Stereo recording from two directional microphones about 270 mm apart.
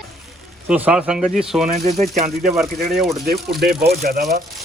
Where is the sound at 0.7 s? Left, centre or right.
Centre.